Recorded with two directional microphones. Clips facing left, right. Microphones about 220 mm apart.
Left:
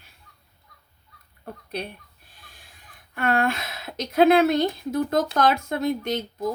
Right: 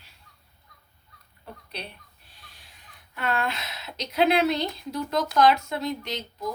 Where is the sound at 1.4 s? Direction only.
50° left (ahead or behind).